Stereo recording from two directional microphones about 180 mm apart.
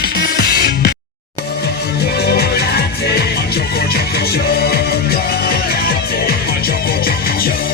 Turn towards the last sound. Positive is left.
turn(degrees=55)  # may be behind; listen again after turning